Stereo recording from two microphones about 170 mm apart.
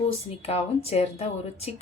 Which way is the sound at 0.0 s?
35° left (ahead or behind).